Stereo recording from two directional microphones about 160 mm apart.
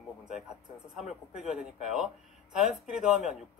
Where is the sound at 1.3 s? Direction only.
5° right (ahead or behind).